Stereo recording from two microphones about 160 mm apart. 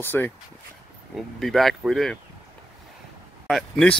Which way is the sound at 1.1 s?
Centre (ahead or behind).